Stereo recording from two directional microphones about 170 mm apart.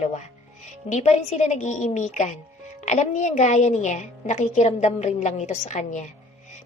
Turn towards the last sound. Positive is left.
turn(degrees=45)  # may be behind; listen again after turning